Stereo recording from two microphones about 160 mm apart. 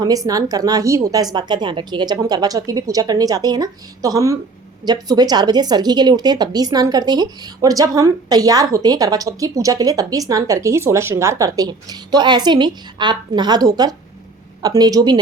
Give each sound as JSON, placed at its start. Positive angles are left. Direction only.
{"t": 0.0, "sound": "a woman's voice", "side_deg": -20}